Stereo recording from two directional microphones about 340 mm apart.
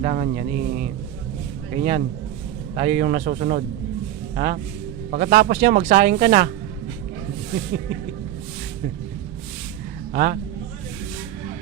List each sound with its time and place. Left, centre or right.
0.0 s speech: right
10.1 s a man's voice: right